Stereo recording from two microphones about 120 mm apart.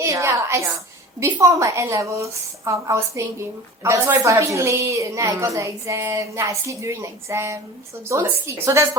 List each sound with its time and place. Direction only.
0.0 s a woman's voice: 25° right (ahead or behind)